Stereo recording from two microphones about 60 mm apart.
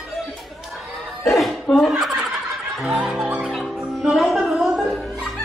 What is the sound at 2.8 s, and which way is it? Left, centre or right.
Music, centre.